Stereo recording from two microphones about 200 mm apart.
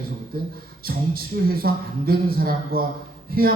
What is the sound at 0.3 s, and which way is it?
Speech, 50° right (ahead or behind).